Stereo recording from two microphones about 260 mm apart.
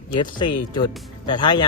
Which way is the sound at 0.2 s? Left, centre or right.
Centre.